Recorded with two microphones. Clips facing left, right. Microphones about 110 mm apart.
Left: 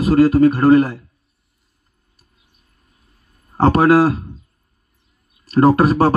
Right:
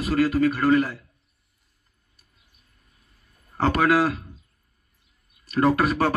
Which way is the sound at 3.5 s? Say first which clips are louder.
Left 8 dB; 35° left (ahead or behind).